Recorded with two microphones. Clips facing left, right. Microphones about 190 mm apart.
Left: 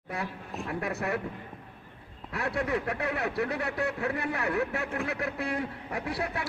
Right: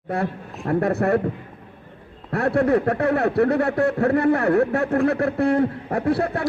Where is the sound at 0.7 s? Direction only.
55° right (ahead or behind).